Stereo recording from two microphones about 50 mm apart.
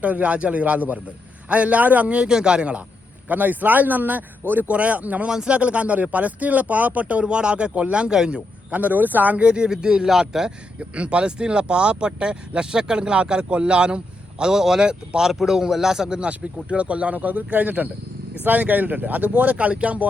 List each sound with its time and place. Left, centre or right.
0.0 s speech: right
3.2 s speech: right
4.7 s speech: right
5.3 s speech: centre
5.5 s speech: right
8.8 s speech: right
9.4 s speech: centre
10.8 s speech: right